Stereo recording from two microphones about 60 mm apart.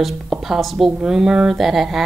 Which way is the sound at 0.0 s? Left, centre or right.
Centre.